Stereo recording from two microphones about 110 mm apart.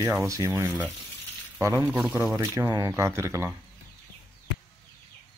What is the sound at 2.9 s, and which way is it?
Speech, 25° right (ahead or behind).